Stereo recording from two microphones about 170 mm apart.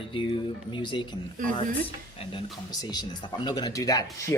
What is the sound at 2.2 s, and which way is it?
Speech, 30° left (ahead or behind).